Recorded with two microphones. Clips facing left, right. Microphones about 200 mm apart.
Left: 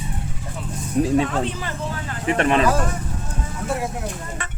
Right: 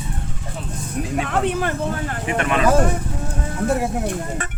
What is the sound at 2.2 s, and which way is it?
Speech, 35° left (ahead or behind).